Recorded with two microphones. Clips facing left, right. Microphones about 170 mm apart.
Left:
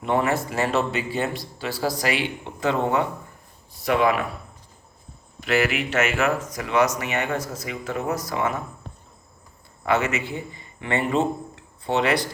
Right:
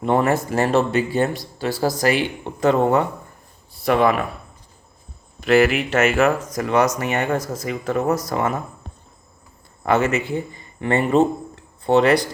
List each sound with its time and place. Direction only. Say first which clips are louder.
0.0 s speech: right 4 dB; 45° right (ahead or behind)
5.5 s speech: right 7 dB; 45° right (ahead or behind)
9.8 s speech: right 4 dB; 45° right (ahead or behind)